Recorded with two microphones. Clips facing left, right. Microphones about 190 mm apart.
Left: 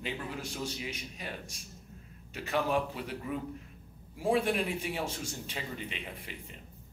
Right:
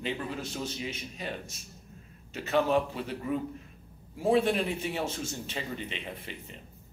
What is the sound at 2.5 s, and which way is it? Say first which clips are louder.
Speech: right 4 dB; 20° right (ahead or behind).